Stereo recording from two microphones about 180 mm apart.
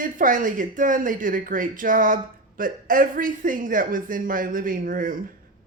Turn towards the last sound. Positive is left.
turn(degrees=-50)  # may be behind; listen again after turning